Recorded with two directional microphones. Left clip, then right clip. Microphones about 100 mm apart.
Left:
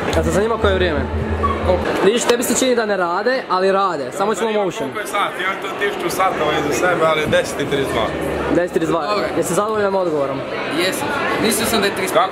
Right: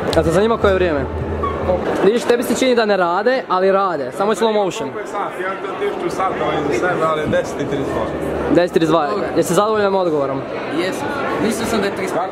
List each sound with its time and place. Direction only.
0.2 s a woman's voice: 15° right (ahead or behind)
2.0 s speech: centre (ahead or behind)
2.7 s a woman's voice: 15° right (ahead or behind)
3.5 s speech: centre (ahead or behind)
6.8 s a man's voice: 15° left (ahead or behind)
8.5 s speech: 30° right (ahead or behind)
9.8 s a woman's voice: 15° right (ahead or behind)
11.4 s speech: centre (ahead or behind)